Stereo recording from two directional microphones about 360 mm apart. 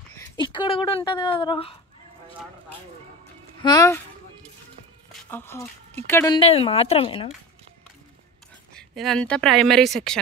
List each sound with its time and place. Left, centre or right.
0.2 s speech: centre
3.6 s speech: centre
5.3 s speech: centre
8.7 s speech: centre